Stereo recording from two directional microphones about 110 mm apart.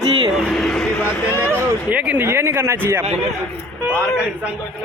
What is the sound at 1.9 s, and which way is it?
Speech, 15° right (ahead or behind).